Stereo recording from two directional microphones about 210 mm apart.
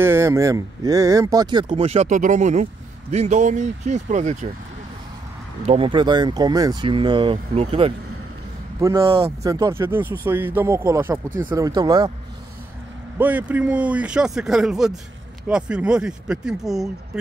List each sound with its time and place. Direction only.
0.0 s speech: 10° right (ahead or behind); by 4.5 s 35° right (ahead or behind)
5.7 s speech: 25° right (ahead or behind)
8.8 s speech: 15° right (ahead or behind)
13.2 s speech: 10° right (ahead or behind)